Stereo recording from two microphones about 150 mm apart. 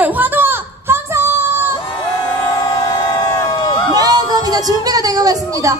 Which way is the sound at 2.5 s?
25° left (ahead or behind).